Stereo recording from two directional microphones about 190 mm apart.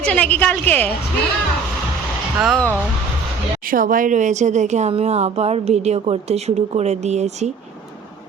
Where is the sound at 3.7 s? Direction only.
45° right (ahead or behind).